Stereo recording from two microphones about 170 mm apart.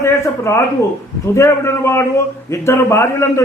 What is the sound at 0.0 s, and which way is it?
A man's voice, 15° left (ahead or behind).